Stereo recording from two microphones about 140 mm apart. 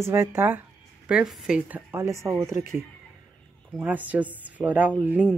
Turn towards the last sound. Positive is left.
turn(degrees=-10)  # may be behind; listen again after turning